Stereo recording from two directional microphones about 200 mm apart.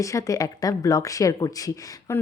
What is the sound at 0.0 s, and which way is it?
A woman's voice, 15° left (ahead or behind).